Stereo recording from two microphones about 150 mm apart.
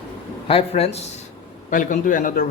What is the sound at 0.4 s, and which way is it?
Speech, 40° left (ahead or behind).